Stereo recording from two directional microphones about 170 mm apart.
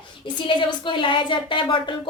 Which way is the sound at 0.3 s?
30° left (ahead or behind).